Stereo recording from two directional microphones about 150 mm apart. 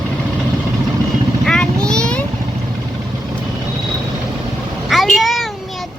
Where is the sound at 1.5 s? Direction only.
5° left (ahead or behind).